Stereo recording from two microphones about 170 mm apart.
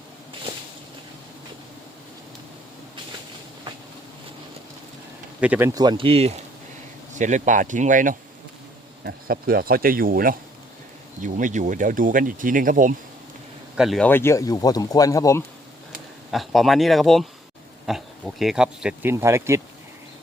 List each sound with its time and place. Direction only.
5.4 s speech: 10° right (ahead or behind)
5.7 s speech: 25° right (ahead or behind); by 8.1 s 50° right (ahead or behind)
9.0 s speech: 60° right (ahead or behind)
13.7 s speech: centre (ahead or behind)
14.1 s speech: 15° left (ahead or behind)
16.3 s speech: centre (ahead or behind)
19.1 s speech: 15° right (ahead or behind)